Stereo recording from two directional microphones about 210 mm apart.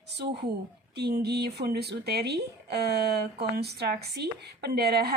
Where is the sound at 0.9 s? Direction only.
50° right (ahead or behind).